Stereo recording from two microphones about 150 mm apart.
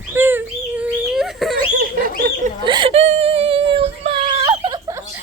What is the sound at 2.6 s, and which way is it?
Whimper, 35° right (ahead or behind).